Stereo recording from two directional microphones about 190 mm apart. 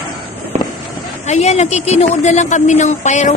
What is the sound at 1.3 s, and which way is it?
Speech, 35° left (ahead or behind).